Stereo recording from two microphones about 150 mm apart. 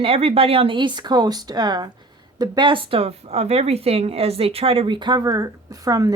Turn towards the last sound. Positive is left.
turn(degrees=-25)  # may be behind; listen again after turning